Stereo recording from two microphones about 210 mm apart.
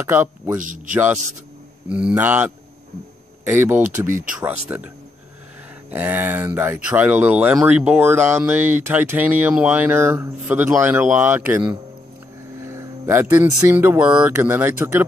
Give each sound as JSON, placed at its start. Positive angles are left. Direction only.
{"t": 0.0, "sound": "speech", "side_deg": -10}
{"t": 0.6, "sound": "speech", "side_deg": -40}
{"t": 0.9, "sound": "speech", "side_deg": -10}